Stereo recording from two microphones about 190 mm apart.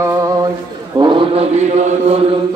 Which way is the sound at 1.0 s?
25° right (ahead or behind).